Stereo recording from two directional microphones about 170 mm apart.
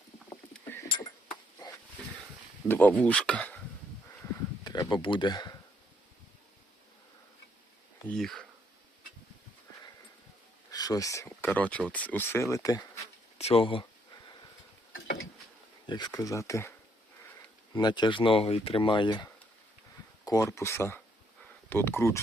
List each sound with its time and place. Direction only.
0.5 s rowboat: 10° left (ahead or behind)
2.0 s a sound: 5° left (ahead or behind)
2.6 s speech: 10° left (ahead or behind)
4.6 s speech: 25° left (ahead or behind)
8.0 s speech: 5° left (ahead or behind)
10.7 s speech: 20° left (ahead or behind)
13.4 s a sound: 35° left (ahead or behind)
15.9 s speech: 25° left (ahead or behind)
17.7 s speech: 25° left (ahead or behind)